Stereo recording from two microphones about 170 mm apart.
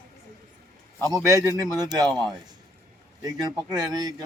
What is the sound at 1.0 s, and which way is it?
Speech, 20° right (ahead or behind).